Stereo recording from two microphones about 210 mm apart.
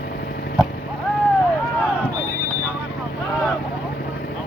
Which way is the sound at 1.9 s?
10° left (ahead or behind).